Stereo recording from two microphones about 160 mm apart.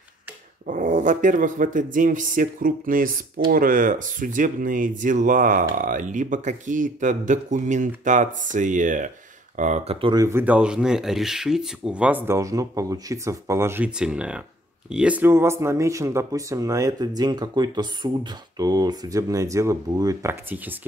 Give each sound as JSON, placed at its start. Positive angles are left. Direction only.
{"t": 0.7, "sound": "speech", "side_deg": -55}
{"t": 10.2, "sound": "speech", "side_deg": -10}